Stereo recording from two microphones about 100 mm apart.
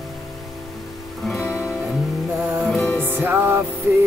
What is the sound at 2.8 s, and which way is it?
Music, 20° left (ahead or behind).